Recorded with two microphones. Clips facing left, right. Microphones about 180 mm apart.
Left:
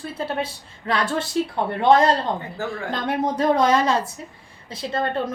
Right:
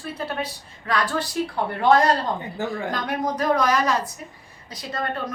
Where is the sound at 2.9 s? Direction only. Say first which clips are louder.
Left 2 dB; 25° left (ahead or behind).